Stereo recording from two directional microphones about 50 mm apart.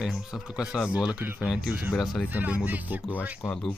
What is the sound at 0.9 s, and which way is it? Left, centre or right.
Speech, right.